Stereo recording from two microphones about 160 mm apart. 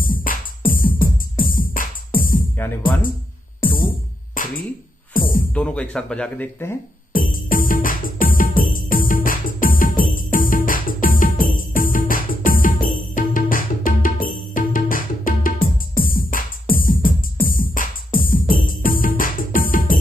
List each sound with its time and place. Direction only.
0.0 s music: 60° left (ahead or behind)
3.6 s music: 60° left (ahead or behind)
5.5 s speech: 5° left (ahead or behind)
7.1 s music: 60° left (ahead or behind)